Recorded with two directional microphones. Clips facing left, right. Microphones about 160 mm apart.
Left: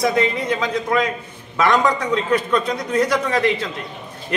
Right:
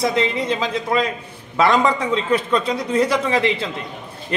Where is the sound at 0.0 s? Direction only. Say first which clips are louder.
Left 1 dB; 25° right (ahead or behind).